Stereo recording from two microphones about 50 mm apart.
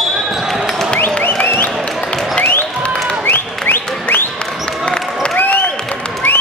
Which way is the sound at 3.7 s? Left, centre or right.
Left.